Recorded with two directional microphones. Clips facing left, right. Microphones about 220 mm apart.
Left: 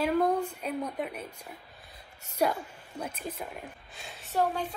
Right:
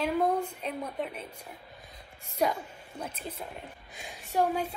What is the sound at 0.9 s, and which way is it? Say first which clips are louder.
Speech: even; 5° left (ahead or behind).